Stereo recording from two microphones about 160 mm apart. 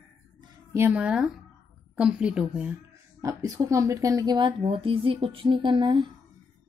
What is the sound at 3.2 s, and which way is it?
A woman's voice, 20° right (ahead or behind).